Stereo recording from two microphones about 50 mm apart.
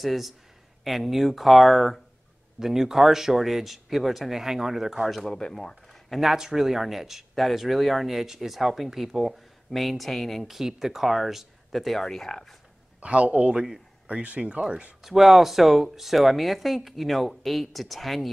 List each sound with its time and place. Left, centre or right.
0.0 s speech: centre
5.2 s speech: centre
6.3 s speech: centre
13.0 s speech: right
15.0 s speech: centre